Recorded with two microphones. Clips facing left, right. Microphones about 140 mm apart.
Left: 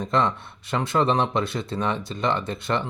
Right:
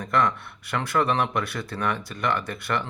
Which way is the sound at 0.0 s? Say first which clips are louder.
Left 1 dB; 25° left (ahead or behind).